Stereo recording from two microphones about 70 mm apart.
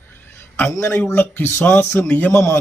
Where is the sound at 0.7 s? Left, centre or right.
Left.